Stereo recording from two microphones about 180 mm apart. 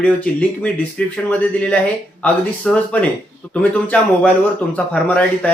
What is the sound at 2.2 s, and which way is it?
Speech, 10° left (ahead or behind).